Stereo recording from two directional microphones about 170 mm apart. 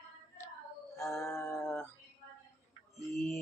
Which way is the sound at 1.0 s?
15° left (ahead or behind).